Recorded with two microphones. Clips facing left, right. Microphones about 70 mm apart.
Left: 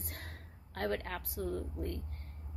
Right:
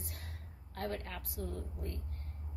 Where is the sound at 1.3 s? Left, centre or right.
Left.